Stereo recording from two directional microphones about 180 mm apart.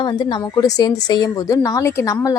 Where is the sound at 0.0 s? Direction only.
25° left (ahead or behind).